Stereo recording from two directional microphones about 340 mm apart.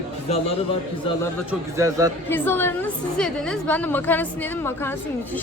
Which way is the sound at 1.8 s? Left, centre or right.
Centre.